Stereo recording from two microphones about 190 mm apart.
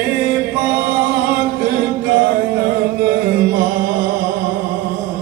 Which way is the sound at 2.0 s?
55° right (ahead or behind).